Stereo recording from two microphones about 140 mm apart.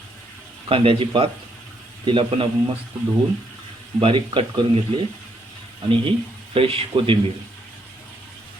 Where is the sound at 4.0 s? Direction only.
40° right (ahead or behind).